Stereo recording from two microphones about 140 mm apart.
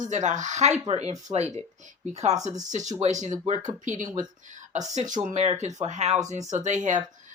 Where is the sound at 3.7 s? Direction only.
65° right (ahead or behind).